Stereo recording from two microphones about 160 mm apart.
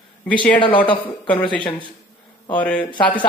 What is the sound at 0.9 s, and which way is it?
Speech, 30° left (ahead or behind).